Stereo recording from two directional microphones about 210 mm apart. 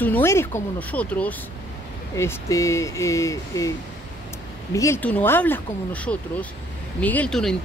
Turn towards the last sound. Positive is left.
turn(degrees=5)  # may be behind; listen again after turning